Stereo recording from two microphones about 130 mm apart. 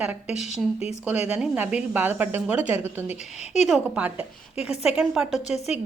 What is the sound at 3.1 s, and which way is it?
Speech, 60° left (ahead or behind).